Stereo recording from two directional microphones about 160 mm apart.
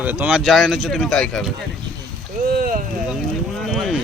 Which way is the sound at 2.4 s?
65° right (ahead or behind).